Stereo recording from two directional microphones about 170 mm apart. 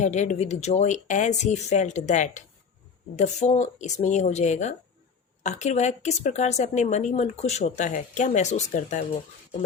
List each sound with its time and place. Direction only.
0.0 s a woman's voice: 45° left (ahead or behind)